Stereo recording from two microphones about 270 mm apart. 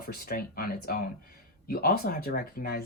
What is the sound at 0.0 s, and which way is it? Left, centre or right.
Speech, left.